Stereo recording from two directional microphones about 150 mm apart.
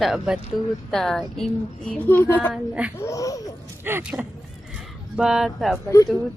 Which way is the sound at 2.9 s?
20° left (ahead or behind).